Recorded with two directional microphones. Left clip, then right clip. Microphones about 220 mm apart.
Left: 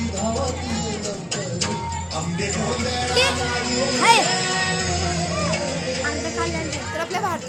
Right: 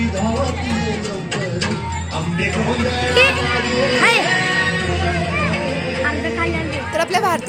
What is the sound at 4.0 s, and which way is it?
Music, 20° left (ahead or behind).